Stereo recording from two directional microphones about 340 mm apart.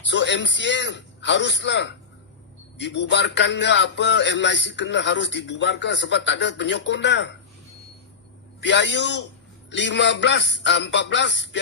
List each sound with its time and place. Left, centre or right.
0.1 s music: left
8.6 s music: left